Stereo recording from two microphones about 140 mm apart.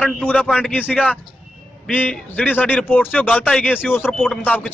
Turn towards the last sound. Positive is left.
turn(degrees=10)  # may be behind; listen again after turning